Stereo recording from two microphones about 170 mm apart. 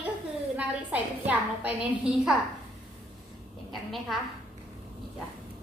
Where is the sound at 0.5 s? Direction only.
10° right (ahead or behind).